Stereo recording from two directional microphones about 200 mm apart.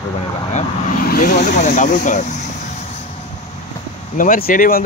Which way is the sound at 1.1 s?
40° left (ahead or behind).